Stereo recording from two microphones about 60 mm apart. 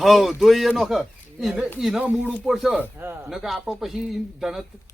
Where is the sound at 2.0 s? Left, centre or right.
Right.